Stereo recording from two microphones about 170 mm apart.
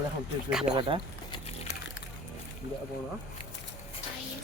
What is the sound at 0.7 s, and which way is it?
Speech, 30° right (ahead or behind).